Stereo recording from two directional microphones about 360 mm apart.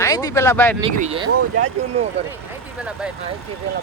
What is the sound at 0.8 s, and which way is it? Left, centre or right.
Speech, centre.